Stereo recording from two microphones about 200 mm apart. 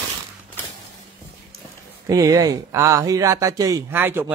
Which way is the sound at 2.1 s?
15° right (ahead or behind).